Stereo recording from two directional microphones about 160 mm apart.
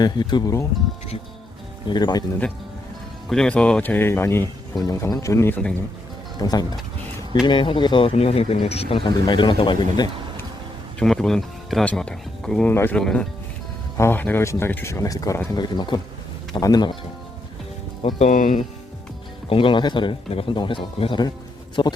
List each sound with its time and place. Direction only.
0.0 s speech: 30° left (ahead or behind)
1.9 s speech: 30° left (ahead or behind)
3.2 s speech: 5° left (ahead or behind); by 10.1 s 30° left (ahead or behind)
11.0 s speech: centre (ahead or behind); by 16.9 s 25° left (ahead or behind)
18.2 s speech: 50° left (ahead or behind)
19.5 s speech: 35° left (ahead or behind)